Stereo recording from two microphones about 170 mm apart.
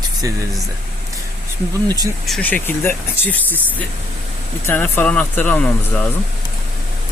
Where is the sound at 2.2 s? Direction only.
5° left (ahead or behind).